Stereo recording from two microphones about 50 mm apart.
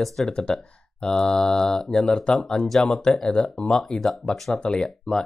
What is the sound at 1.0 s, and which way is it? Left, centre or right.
Speech, centre.